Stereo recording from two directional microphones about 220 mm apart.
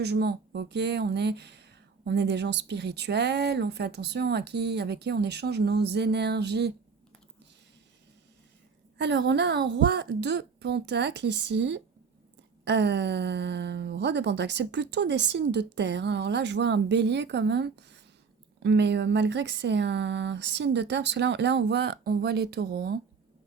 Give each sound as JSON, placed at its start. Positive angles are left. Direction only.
{"t": 0.0, "sound": "speech", "side_deg": -50}
{"t": 9.0, "sound": "speech", "side_deg": -50}